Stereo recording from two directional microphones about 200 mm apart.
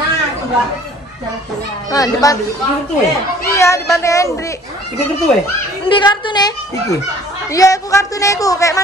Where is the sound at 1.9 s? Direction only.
15° left (ahead or behind).